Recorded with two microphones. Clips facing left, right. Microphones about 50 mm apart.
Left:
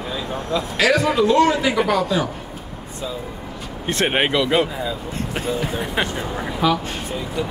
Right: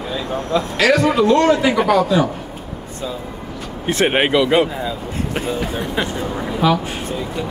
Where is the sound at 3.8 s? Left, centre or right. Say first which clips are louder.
Right 3 dB; centre.